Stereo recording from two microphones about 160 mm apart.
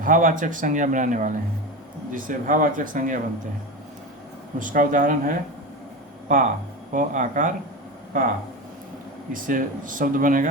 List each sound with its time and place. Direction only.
0.0 s a man's voice: 55° right (ahead or behind)
4.6 s speech: 55° right (ahead or behind)
9.3 s speech: 60° right (ahead or behind)